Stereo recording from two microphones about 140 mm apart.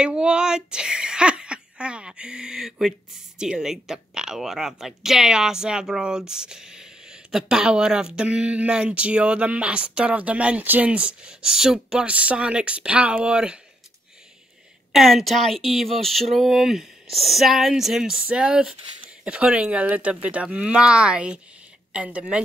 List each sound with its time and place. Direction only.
0.0 s speech: 5° right (ahead or behind)
14.9 s speech: centre (ahead or behind)